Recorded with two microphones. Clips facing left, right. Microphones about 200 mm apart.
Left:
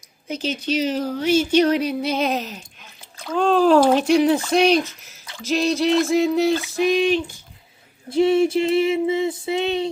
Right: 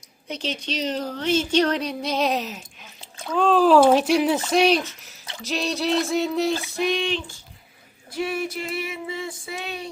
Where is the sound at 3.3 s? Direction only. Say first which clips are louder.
Left 1 dB; 5° right (ahead or behind).